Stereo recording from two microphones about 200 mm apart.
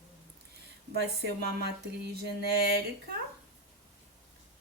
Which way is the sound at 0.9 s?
55° right (ahead or behind).